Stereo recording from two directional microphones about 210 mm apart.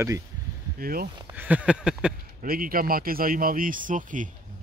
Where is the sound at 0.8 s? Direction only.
45° right (ahead or behind).